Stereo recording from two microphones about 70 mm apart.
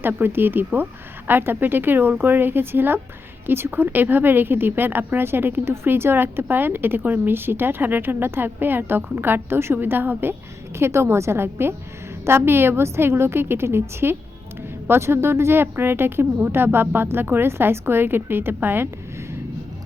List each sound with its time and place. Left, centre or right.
0.2 s speech: right